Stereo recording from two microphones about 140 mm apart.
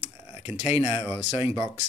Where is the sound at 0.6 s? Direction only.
45° left (ahead or behind).